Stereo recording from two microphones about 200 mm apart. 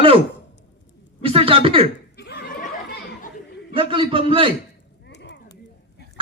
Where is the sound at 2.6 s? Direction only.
50° left (ahead or behind).